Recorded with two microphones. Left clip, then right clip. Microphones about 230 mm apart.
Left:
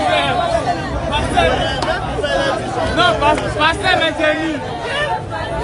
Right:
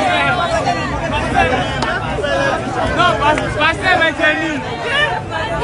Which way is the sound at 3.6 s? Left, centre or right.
Centre.